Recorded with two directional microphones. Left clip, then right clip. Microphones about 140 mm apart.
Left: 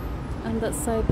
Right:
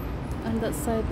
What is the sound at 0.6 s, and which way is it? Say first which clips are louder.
Speech: left 2 dB; 25° left (ahead or behind).